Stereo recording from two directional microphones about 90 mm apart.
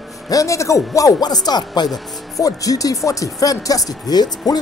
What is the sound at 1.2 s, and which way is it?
Speech, 50° left (ahead or behind).